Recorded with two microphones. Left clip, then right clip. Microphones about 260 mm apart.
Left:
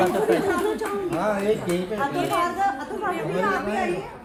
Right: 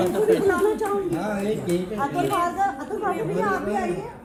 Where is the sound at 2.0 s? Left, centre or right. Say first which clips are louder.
Even; centre.